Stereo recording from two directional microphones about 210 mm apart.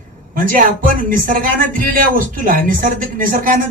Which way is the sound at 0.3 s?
40° right (ahead or behind).